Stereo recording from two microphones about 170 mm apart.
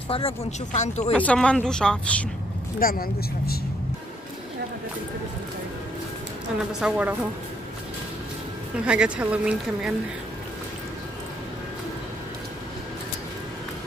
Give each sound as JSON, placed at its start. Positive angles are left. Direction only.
{"t": 0.1, "sound": "speech", "side_deg": 40}
{"t": 1.1, "sound": "speech", "side_deg": 5}
{"t": 2.8, "sound": "speech", "side_deg": 60}
{"t": 6.7, "sound": "speech", "side_deg": -5}
{"t": 8.8, "sound": "speech", "side_deg": -5}